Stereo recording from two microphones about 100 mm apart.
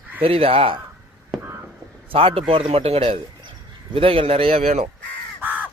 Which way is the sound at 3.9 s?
65° right (ahead or behind).